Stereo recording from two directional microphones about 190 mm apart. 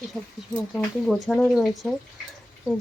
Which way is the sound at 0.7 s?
Centre (ahead or behind).